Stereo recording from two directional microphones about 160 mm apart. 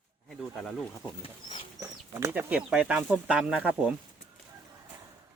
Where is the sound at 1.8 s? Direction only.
15° right (ahead or behind).